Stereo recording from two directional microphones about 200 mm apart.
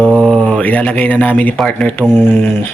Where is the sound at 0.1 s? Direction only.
5° right (ahead or behind).